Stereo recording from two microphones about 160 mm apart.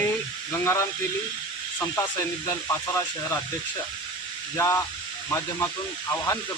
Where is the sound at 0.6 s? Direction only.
15° left (ahead or behind).